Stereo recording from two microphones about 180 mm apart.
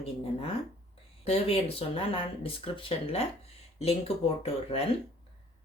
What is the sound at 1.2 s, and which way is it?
Speech, 35° left (ahead or behind).